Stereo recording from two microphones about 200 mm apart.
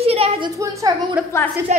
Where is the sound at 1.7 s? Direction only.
35° right (ahead or behind).